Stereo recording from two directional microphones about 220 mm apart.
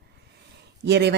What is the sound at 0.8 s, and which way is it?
Speech, 50° right (ahead or behind).